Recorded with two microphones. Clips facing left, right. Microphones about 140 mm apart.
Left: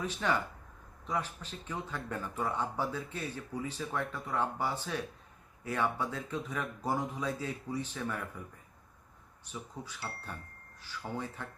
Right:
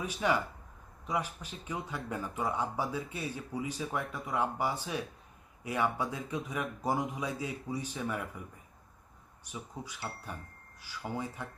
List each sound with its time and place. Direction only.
0.0 s speech: 10° right (ahead or behind)
9.4 s speech: 10° right (ahead or behind)